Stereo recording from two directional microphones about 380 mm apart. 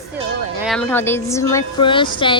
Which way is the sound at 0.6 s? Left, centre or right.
Centre.